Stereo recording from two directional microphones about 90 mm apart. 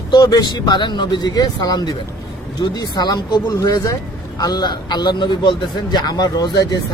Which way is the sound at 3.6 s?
35° left (ahead or behind).